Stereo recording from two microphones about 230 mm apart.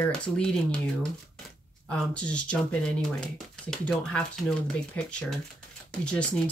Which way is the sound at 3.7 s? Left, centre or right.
Centre.